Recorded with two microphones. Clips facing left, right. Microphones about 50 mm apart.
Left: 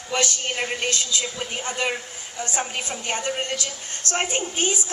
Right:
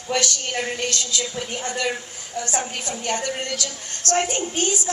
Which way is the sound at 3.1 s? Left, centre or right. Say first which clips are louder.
Even; left.